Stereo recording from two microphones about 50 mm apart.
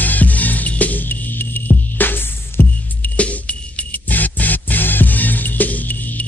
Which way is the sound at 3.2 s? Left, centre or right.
Left.